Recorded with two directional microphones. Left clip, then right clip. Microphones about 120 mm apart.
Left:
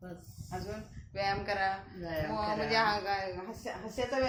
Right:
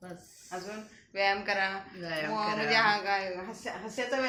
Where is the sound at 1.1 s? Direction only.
30° right (ahead or behind).